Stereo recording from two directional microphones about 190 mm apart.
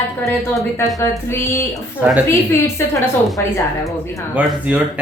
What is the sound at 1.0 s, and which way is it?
A woman's voice, 15° left (ahead or behind).